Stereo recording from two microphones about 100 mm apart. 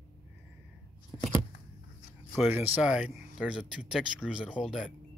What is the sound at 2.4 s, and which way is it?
Speech, 20° right (ahead or behind).